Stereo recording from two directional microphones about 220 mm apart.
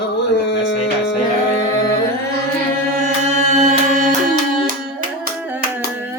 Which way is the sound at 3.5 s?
30° right (ahead or behind).